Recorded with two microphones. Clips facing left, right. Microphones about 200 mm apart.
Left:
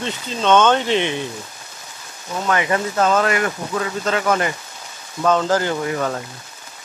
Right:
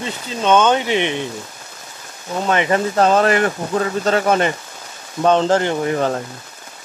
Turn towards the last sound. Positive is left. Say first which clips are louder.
# right 3 dB
turn(degrees=-30)  # may be behind; listen again after turning